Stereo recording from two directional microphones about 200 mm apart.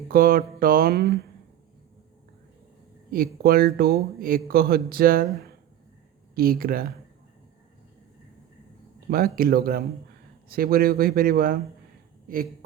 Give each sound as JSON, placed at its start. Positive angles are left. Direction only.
{"t": 0.1, "sound": "speech", "side_deg": -45}
{"t": 3.1, "sound": "speech", "side_deg": -45}
{"t": 9.0, "sound": "speech", "side_deg": -45}